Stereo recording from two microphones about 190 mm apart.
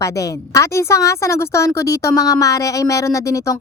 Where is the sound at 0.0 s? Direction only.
15° left (ahead or behind).